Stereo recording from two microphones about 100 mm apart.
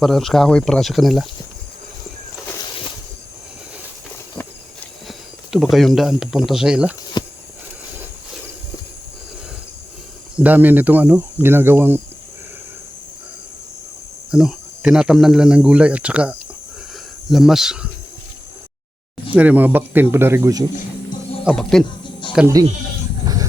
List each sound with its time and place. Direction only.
0.0 s speech: centre (ahead or behind)
5.0 s speech: centre (ahead or behind)
7.2 s a sound: 45° left (ahead or behind)
10.3 s speech: 15° right (ahead or behind)
14.3 s speech: 5° right (ahead or behind)
19.3 s speech: 15° right (ahead or behind)
21.5 s speech: 5° left (ahead or behind)
22.4 s speech: 5° right (ahead or behind)
23.2 s a sound: 40° right (ahead or behind)